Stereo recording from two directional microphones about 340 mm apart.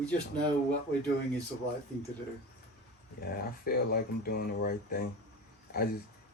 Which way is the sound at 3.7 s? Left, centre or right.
Left.